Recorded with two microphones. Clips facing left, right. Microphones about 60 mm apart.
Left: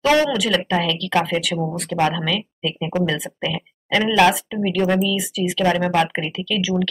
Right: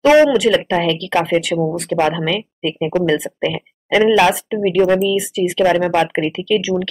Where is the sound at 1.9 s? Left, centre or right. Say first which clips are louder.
Right 2 dB; centre.